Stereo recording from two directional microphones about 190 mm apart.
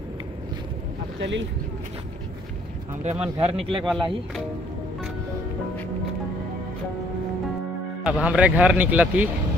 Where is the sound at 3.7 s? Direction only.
Centre (ahead or behind).